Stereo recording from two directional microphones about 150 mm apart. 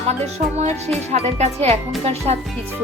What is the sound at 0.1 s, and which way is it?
Speech, 45° right (ahead or behind).